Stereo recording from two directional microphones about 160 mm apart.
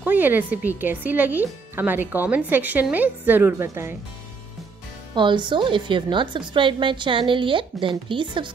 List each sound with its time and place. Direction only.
0.0 s speech: 10° right (ahead or behind)
5.1 s a woman's voice: 30° right (ahead or behind)